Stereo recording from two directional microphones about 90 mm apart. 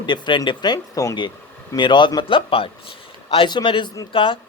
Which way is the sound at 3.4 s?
60° left (ahead or behind).